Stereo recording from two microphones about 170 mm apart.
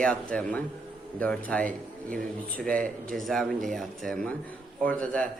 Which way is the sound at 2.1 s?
55° right (ahead or behind).